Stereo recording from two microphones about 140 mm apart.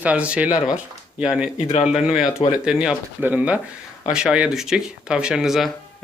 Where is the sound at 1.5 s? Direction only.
45° left (ahead or behind).